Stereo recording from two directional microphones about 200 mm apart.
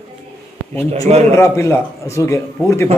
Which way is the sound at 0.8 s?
15° left (ahead or behind).